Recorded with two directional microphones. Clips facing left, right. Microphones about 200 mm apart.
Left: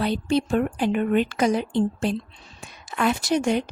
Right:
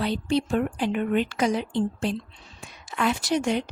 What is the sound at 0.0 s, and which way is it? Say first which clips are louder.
Speech: left 2 dB; 50° left (ahead or behind).